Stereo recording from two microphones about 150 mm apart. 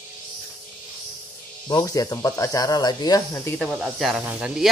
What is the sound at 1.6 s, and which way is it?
Speech, 25° left (ahead or behind).